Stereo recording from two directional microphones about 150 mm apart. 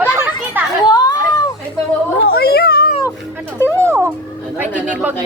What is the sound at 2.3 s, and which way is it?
Speech, 90° left.